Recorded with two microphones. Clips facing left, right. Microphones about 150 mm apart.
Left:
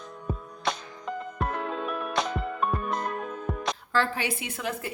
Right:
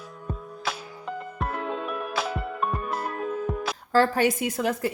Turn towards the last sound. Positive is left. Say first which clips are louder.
# right 7 dB
turn(degrees=-40)  # may be behind; listen again after turning